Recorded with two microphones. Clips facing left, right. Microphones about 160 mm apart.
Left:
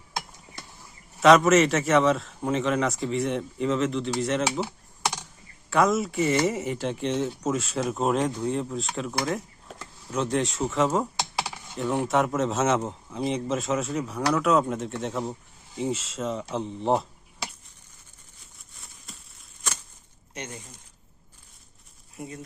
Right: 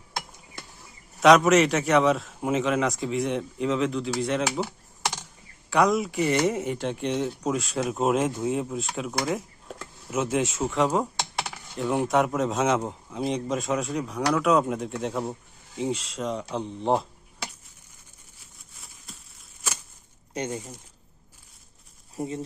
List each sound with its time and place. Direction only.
1.2 s speech: centre (ahead or behind)
18.8 s a sound: centre (ahead or behind)
20.3 s speech: 30° right (ahead or behind)
22.1 s speech: 30° right (ahead or behind)